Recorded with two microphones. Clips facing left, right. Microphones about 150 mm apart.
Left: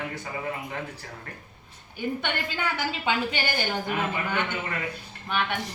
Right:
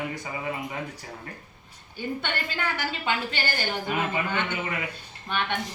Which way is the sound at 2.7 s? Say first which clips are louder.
Left 3 dB; 15° left (ahead or behind).